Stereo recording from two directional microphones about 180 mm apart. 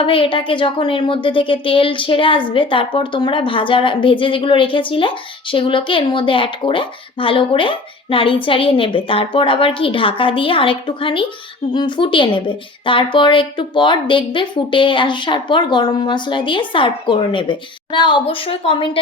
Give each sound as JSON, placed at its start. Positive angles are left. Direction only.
{"t": 0.0, "sound": "a woman's voice", "side_deg": 30}